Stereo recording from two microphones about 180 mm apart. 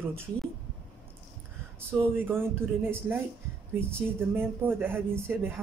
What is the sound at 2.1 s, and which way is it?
Speech, 10° right (ahead or behind).